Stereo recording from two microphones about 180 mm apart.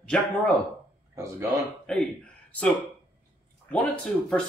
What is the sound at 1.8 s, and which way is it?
Speech, 5° left (ahead or behind).